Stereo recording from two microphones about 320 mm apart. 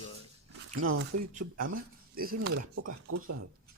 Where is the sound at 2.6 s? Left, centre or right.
Right.